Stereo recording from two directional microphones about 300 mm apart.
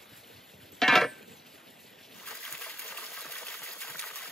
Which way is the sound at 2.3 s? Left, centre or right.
Centre.